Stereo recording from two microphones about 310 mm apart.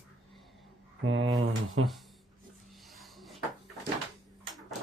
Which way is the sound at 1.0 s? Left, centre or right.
Right.